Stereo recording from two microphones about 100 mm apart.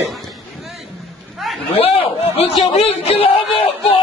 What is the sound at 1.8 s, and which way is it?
Chatter, 80° left.